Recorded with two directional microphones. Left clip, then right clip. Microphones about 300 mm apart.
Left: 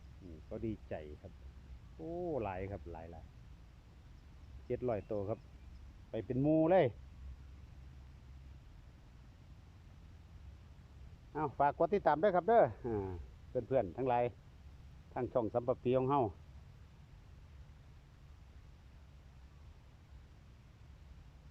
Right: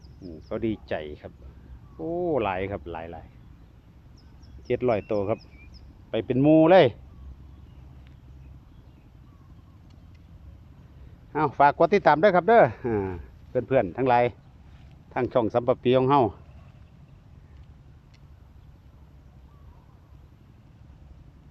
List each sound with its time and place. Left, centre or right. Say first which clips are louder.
1.2 s speech: right 14 dB; centre
2.0 s speech: right 13 dB; centre
2.3 s speech: right 15 dB; centre
4.7 s speech: right 13 dB; centre
11.3 s speech: right 13 dB; centre